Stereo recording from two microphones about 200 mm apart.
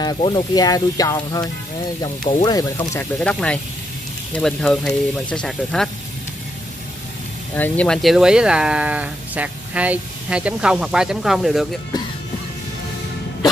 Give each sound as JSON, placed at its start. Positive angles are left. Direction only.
{"t": 0.0, "sound": "speech", "side_deg": 20}
{"t": 7.5, "sound": "speech", "side_deg": 10}